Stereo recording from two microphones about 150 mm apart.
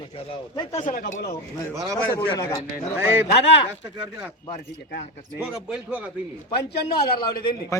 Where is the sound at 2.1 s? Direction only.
25° left (ahead or behind).